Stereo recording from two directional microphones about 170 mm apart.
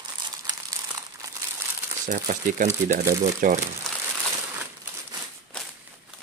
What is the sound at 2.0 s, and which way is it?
Speech, 50° right (ahead or behind).